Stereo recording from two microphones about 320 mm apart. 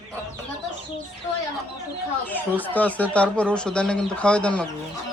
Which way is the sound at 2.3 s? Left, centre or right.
Centre.